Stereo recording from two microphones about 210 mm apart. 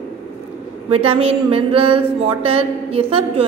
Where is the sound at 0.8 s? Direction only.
25° right (ahead or behind).